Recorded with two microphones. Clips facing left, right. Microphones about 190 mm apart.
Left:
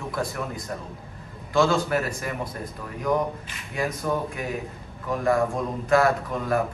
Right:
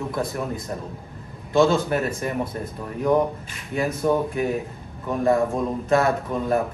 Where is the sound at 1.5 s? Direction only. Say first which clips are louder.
Right 3 dB; 20° right (ahead or behind).